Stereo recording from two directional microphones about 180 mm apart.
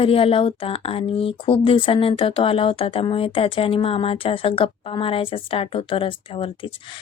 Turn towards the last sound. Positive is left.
turn(degrees=30)  # may be behind; listen again after turning